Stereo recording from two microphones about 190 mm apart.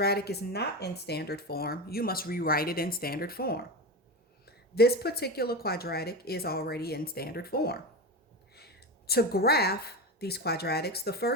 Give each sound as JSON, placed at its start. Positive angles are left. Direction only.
{"t": 0.0, "sound": "a woman's voice", "side_deg": 55}